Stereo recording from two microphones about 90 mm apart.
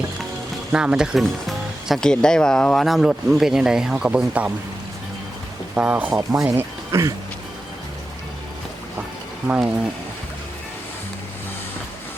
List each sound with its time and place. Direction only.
0.7 s speech: 10° right (ahead or behind)
1.2 s speech: centre (ahead or behind)
5.7 s speech: 15° right (ahead or behind)
6.3 s speech: 40° right (ahead or behind)
9.5 s speech: 15° right (ahead or behind)